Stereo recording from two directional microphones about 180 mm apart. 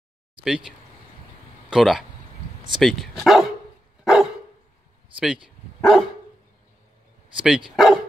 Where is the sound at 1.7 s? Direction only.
Centre (ahead or behind).